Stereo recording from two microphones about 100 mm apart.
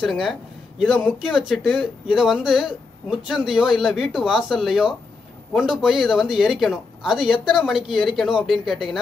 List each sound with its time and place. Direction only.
0.0 s speech: centre (ahead or behind)